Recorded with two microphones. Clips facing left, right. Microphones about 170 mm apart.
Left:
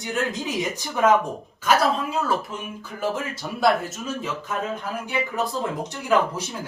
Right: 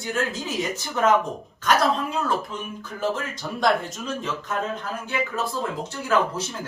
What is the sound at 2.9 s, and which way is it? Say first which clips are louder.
Speech: even; 10° left (ahead or behind).